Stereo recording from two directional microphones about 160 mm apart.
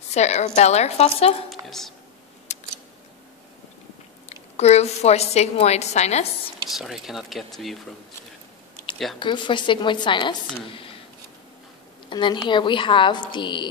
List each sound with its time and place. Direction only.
0.1 s a woman's voice: 45° left (ahead or behind)
1.5 s a sound: centre (ahead or behind)
2.5 s a sound: 45° left (ahead or behind)
4.6 s a woman's voice: 40° left (ahead or behind)
6.7 s speech: centre (ahead or behind)
9.2 s a woman's voice: 30° left (ahead or behind)
12.1 s a woman's voice: 30° left (ahead or behind)